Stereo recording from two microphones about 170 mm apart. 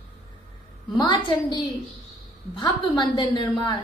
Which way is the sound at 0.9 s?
25° left (ahead or behind).